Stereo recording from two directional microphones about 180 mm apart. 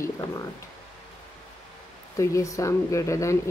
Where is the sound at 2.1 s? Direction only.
15° left (ahead or behind).